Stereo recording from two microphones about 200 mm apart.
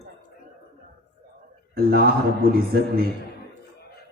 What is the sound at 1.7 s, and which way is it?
Speech, 50° right (ahead or behind).